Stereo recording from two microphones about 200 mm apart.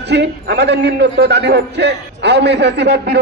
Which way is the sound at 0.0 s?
60° right (ahead or behind).